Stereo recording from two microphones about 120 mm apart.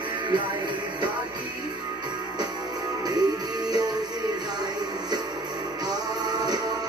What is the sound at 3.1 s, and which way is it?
Music, 35° right (ahead or behind).